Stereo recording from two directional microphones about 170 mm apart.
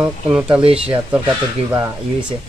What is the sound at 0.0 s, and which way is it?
Speech, 5° right (ahead or behind).